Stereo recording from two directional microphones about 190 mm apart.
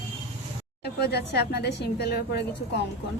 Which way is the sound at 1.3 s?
60° left (ahead or behind).